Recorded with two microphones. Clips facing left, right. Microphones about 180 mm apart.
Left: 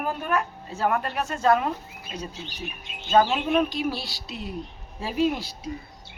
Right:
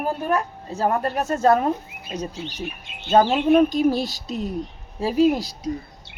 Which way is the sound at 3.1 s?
40° right (ahead or behind).